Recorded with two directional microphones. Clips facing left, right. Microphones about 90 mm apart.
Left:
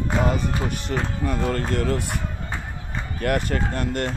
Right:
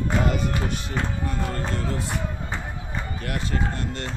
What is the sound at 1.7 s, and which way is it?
Speech, 70° left (ahead or behind).